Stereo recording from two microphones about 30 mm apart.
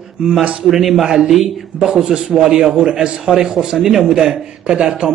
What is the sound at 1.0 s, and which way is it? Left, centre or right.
A man's voice, right.